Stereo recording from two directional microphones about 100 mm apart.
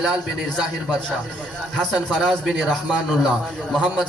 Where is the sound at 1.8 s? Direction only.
5° left (ahead or behind).